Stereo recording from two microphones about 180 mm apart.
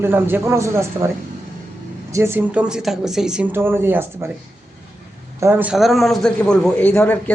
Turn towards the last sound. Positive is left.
turn(degrees=10)  # may be behind; listen again after turning